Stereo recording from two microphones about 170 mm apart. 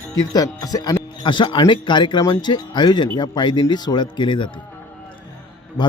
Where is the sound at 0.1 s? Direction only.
20° left (ahead or behind).